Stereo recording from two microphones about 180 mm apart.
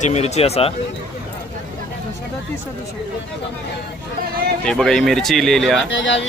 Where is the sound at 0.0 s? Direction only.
40° left (ahead or behind).